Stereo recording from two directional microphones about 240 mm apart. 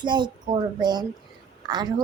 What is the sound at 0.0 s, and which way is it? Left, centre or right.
A woman's voice, centre.